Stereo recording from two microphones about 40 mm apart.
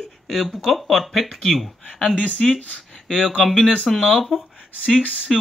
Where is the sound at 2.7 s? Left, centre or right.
Centre.